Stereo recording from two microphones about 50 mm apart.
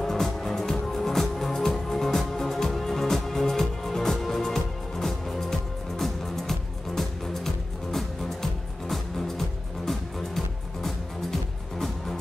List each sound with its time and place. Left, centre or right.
0.0 s music: centre